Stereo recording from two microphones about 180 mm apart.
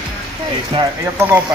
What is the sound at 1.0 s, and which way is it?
Speech, 10° right (ahead or behind).